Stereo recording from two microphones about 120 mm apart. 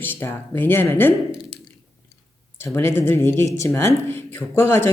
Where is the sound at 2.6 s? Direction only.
20° left (ahead or behind).